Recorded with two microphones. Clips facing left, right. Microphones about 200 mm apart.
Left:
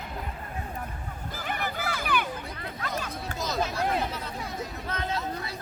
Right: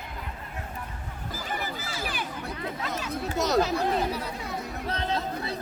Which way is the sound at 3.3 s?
75° right (ahead or behind).